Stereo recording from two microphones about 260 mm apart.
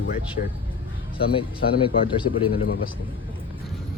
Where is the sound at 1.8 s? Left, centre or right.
Centre.